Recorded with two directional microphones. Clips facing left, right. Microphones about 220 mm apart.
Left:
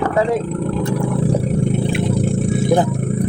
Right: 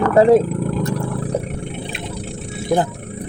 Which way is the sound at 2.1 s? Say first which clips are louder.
Left 11 dB; 50° left (ahead or behind).